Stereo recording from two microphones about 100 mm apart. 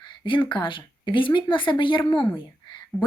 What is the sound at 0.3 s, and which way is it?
Speech, 50° left (ahead or behind).